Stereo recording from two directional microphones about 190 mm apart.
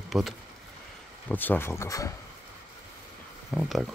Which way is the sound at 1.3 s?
10° left (ahead or behind).